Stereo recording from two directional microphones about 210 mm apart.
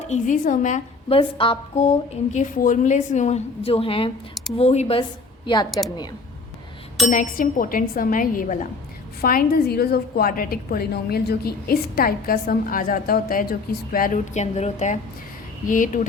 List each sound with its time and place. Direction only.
0.1 s a woman's voice: 35° left (ahead or behind); by 5.8 s 20° left (ahead or behind)
7.1 s a woman's voice: 40° left (ahead or behind)